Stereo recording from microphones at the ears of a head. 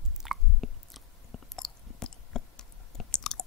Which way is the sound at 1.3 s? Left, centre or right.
Left.